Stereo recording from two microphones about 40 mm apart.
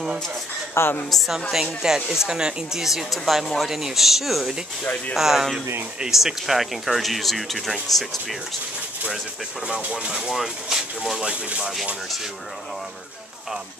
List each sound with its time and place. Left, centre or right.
0.7 s a woman's voice: left
1.1 s speech: centre
9.8 s speech: right
10.2 s speech: centre
11.0 s speech: centre